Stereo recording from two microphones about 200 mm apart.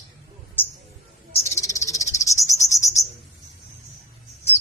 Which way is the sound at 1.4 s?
15° left (ahead or behind).